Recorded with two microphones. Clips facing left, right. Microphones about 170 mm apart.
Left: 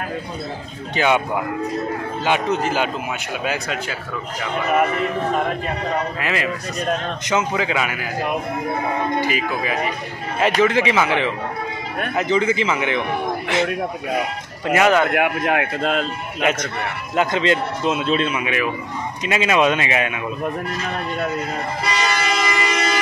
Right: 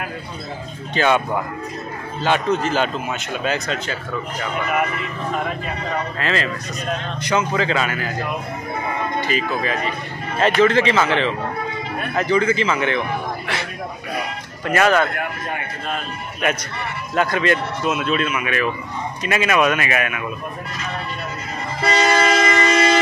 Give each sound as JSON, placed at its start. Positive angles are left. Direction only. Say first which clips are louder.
{"t": 0.9, "sound": "a man's voice", "louder": "even", "side_deg": 15}
{"t": 6.1, "sound": "a man's voice", "louder": "even", "side_deg": 15}
{"t": 9.2, "sound": "a man's voice", "louder": "even", "side_deg": 10}
{"t": 14.7, "sound": "a man's voice", "louder": "left 1 dB", "side_deg": 15}
{"t": 15.0, "sound": "speech", "louder": "left 8 dB", "side_deg": 75}
{"t": 16.4, "sound": "speech", "louder": "left 2 dB", "side_deg": 20}
{"t": 21.8, "sound": "vehicle", "louder": "right 7 dB", "side_deg": -50}